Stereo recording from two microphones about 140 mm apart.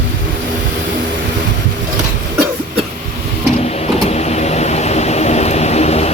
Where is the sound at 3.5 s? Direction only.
50° left (ahead or behind).